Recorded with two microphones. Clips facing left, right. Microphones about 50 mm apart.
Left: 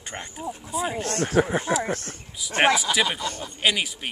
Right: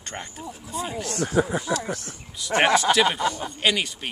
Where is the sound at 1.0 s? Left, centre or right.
Left.